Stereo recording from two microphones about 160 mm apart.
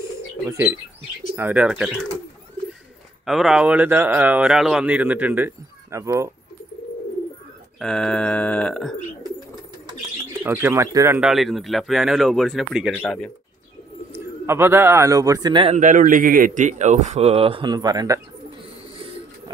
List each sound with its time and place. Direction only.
0.5 s speech: 15° right (ahead or behind)
3.3 s speech: centre (ahead or behind); by 6.3 s 20° right (ahead or behind)
7.8 s speech: 5° left (ahead or behind)
10.4 s speech: 15° right (ahead or behind)
11.1 s speech: centre (ahead or behind)
14.1 s a man's voice: 15° right (ahead or behind)
15.7 s a man's voice: 55° right (ahead or behind); by 18.2 s 20° right (ahead or behind)